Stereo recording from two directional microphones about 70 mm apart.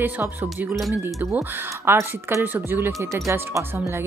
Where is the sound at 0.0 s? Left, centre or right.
Right.